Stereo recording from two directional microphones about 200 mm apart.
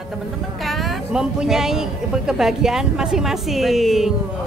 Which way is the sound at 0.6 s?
Centre (ahead or behind).